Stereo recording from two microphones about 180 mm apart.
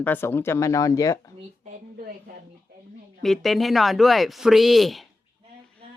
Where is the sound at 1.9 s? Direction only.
55° right (ahead or behind).